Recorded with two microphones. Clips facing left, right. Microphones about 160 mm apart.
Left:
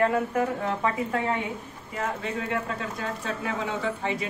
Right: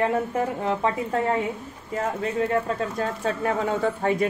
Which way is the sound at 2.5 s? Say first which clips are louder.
Right 6 dB; 40° right (ahead or behind).